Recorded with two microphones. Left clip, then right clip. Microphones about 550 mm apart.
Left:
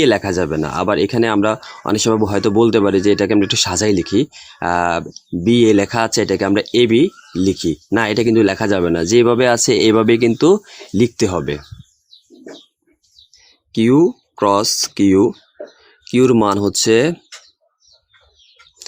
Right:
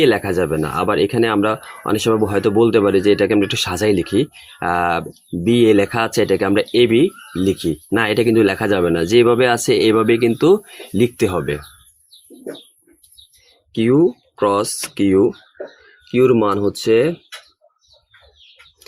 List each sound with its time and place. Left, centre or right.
0.0 s speech: left
13.7 s speech: left